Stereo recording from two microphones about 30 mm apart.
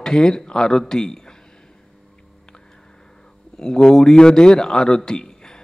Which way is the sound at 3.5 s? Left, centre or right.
Left.